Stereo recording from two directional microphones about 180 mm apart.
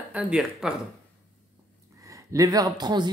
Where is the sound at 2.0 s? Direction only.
20° right (ahead or behind).